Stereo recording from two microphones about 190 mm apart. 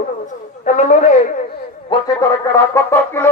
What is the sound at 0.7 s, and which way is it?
Speech, 40° left (ahead or behind).